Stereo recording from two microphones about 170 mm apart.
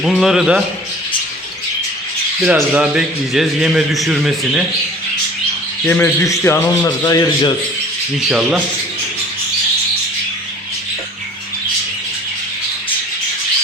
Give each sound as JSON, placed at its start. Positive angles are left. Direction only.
{"t": 0.0, "sound": "a man's voice", "side_deg": 0}
{"t": 2.4, "sound": "a man's voice", "side_deg": -5}
{"t": 5.8, "sound": "a man's voice", "side_deg": 10}
{"t": 8.2, "sound": "a man's voice", "side_deg": -5}